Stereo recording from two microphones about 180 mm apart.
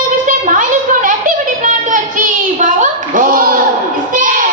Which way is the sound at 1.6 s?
45° right (ahead or behind).